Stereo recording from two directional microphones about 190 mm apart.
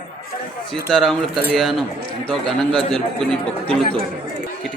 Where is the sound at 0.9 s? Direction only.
Centre (ahead or behind).